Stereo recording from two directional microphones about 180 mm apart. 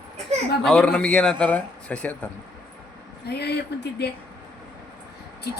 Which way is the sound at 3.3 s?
65° left (ahead or behind).